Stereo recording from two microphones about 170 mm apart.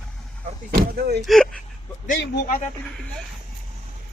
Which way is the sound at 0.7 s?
65° right (ahead or behind).